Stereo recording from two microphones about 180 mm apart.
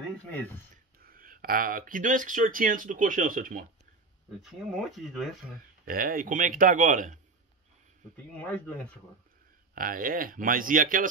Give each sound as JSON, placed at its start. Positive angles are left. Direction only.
{"t": 0.9, "sound": "speech", "side_deg": -55}
{"t": 4.4, "sound": "speech", "side_deg": 0}
{"t": 5.9, "sound": "speech", "side_deg": -55}
{"t": 8.4, "sound": "speech", "side_deg": 10}
{"t": 9.8, "sound": "speech", "side_deg": -50}